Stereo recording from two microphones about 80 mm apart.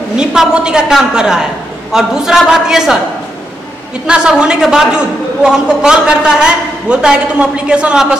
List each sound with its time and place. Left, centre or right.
0.1 s a man's voice: centre
4.1 s a man's voice: centre